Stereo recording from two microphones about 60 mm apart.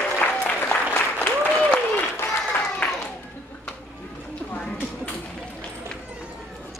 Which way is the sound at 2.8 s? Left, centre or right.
Left.